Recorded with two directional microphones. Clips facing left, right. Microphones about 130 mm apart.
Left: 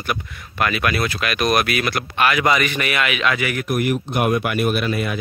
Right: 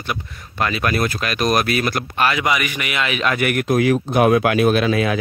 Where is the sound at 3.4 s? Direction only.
65° right (ahead or behind); by 3.9 s 80° right.